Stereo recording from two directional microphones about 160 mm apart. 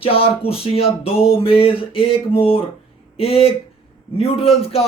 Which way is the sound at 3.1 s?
35° left (ahead or behind).